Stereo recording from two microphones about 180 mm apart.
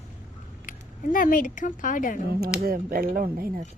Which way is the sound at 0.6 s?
50° left (ahead or behind).